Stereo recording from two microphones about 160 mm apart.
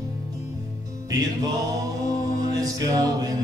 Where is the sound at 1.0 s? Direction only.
25° right (ahead or behind).